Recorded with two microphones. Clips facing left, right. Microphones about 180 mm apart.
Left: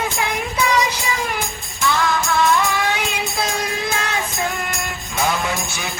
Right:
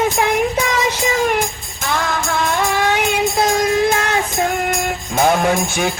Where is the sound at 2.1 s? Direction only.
50° right (ahead or behind).